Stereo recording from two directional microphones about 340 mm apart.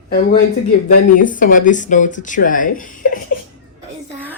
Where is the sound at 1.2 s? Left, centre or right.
Left.